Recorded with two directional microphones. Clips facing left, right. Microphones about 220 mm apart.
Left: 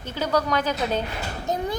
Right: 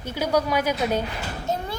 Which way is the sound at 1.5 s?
15° left (ahead or behind).